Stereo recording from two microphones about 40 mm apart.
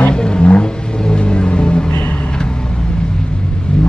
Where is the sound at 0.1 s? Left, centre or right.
Left.